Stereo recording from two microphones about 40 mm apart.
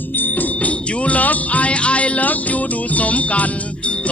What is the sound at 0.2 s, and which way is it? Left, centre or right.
Music, left.